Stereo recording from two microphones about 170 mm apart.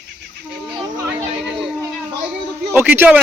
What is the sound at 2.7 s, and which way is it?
Speech, 10° right (ahead or behind).